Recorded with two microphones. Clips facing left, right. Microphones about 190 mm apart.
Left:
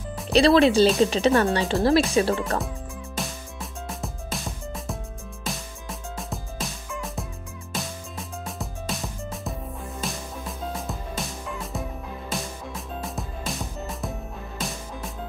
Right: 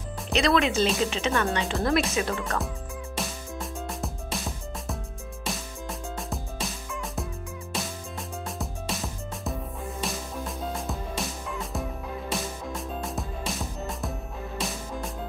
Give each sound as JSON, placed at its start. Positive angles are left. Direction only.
{"t": 0.3, "sound": "speech", "side_deg": 35}
{"t": 3.2, "sound": "music", "side_deg": 0}